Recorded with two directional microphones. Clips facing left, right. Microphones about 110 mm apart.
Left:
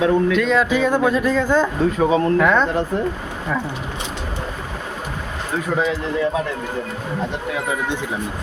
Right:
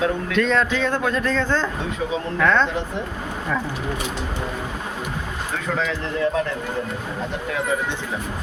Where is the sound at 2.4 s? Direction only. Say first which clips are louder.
Left 2 dB; 10° left (ahead or behind).